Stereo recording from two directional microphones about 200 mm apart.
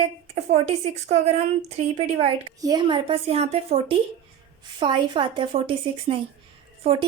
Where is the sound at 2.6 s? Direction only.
20° right (ahead or behind).